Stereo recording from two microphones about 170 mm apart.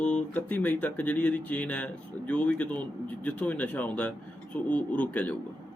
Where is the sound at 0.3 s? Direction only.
10° left (ahead or behind).